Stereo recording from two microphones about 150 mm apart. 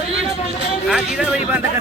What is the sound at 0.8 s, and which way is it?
Speech, 5° right (ahead or behind).